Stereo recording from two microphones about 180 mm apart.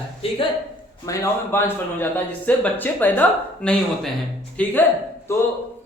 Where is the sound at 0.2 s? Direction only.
30° left (ahead or behind).